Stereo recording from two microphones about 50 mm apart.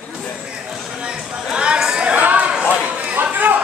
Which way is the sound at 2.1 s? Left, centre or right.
Right.